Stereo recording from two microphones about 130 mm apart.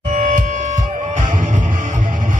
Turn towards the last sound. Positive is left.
turn(degrees=-80)